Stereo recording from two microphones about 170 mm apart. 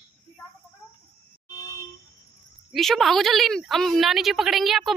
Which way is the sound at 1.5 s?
20° left (ahead or behind).